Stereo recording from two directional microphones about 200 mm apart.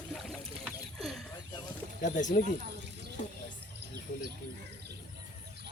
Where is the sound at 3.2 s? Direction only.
35° left (ahead or behind).